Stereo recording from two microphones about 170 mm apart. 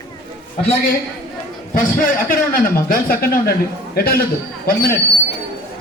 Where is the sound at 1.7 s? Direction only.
55° left (ahead or behind).